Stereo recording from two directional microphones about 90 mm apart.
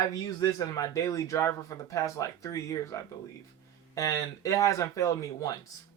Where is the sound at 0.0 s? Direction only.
40° left (ahead or behind).